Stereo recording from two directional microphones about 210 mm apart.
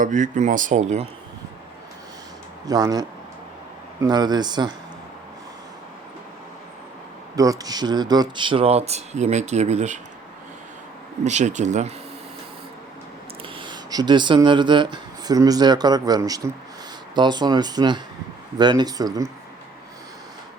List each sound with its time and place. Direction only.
0.0 s speech: 35° right (ahead or behind)
2.6 s speech: 15° right (ahead or behind)
7.3 s speech: 15° right (ahead or behind); by 10.0 s 35° right (ahead or behind)
11.2 s speech: 35° right (ahead or behind)
13.6 s speech: 20° right (ahead or behind)